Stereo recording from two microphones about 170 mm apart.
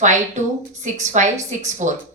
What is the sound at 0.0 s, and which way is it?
A woman's voice, 45° right (ahead or behind).